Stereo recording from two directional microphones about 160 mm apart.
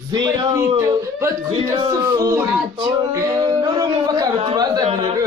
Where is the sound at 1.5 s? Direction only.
30° right (ahead or behind).